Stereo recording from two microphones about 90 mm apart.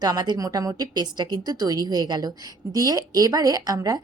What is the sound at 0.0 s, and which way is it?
A woman's voice, 50° right (ahead or behind).